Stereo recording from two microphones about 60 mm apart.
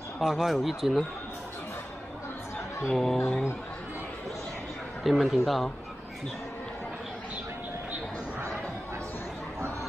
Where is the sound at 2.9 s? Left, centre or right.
Centre.